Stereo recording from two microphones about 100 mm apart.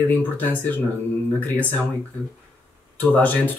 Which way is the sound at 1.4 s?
20° left (ahead or behind).